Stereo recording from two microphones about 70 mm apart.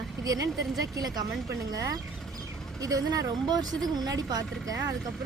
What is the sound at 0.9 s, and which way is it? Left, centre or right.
Speech, right.